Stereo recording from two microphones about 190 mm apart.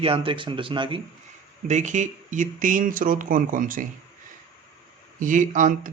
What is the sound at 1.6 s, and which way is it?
Speech, 40° right (ahead or behind).